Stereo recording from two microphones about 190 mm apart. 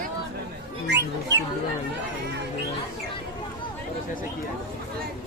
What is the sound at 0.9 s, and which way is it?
Music, 65° right (ahead or behind).